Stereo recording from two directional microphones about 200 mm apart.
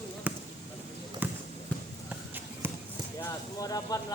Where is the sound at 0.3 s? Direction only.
10° right (ahead or behind).